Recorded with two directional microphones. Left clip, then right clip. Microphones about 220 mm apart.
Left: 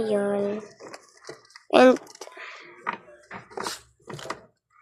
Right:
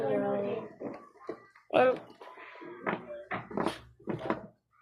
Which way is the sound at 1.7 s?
55° left (ahead or behind).